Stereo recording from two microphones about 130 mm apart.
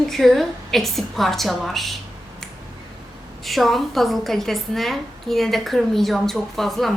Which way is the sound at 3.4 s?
Centre (ahead or behind).